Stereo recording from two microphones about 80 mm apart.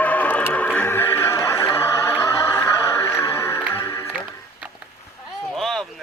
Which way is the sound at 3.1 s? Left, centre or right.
Left.